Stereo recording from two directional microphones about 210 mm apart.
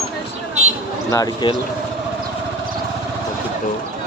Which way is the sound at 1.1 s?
20° left (ahead or behind).